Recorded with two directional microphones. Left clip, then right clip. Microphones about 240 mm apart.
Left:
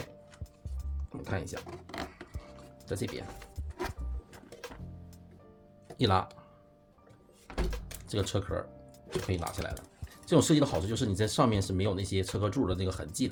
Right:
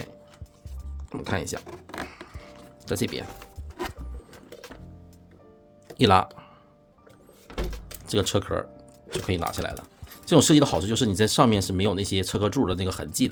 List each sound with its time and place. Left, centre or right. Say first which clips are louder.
1.1 s speech: right 8 dB; right
2.3 s music: right 5 dB; centre
2.8 s speech: right 8 dB; right
3.8 s music: right 4 dB; centre
6.0 s speech: right 9 dB; right
7.4 s door: right 3 dB; centre
8.0 s speech: right 9 dB; right